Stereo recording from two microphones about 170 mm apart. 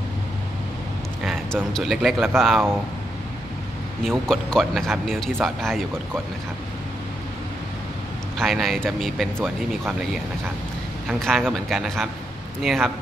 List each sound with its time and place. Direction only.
1.2 s speech: centre (ahead or behind)
4.0 s speech: 5° left (ahead or behind)
8.4 s speech: centre (ahead or behind)
11.1 s speech: centre (ahead or behind)